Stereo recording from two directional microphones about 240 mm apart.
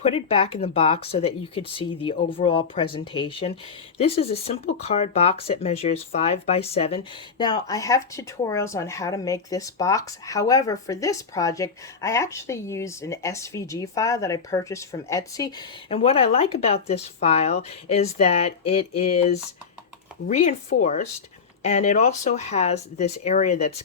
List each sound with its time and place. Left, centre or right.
0.0 s speech: left